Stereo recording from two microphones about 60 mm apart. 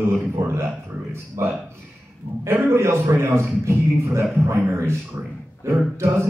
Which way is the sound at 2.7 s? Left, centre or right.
Right.